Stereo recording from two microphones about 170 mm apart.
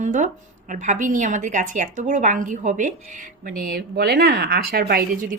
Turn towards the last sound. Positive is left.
turn(degrees=-55)  # may be behind; listen again after turning